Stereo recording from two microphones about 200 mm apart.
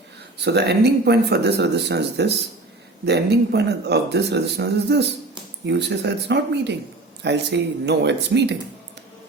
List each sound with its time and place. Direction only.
0.4 s speech: 55° right (ahead or behind)